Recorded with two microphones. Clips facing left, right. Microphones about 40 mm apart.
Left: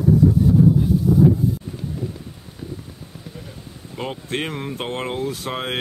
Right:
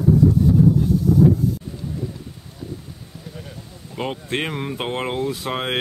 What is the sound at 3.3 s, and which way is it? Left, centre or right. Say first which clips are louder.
Speech: even; centre.